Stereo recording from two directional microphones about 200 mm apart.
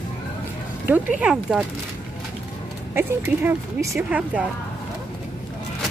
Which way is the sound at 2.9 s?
10° right (ahead or behind).